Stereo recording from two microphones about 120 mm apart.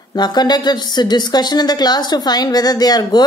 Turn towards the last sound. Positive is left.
turn(degrees=35)  # may be behind; listen again after turning